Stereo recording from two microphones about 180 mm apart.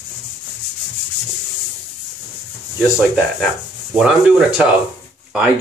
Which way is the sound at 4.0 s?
5° right (ahead or behind).